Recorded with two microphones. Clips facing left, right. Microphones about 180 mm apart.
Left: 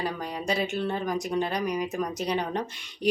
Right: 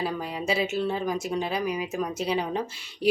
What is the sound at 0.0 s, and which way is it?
Speech, 5° right (ahead or behind).